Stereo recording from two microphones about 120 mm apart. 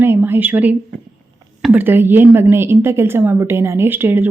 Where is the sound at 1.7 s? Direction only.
15° right (ahead or behind).